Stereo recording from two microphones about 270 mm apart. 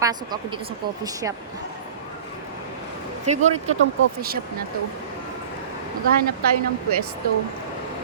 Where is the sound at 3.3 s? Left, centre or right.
Right.